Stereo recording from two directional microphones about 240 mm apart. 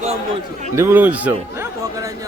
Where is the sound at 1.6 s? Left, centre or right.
Centre.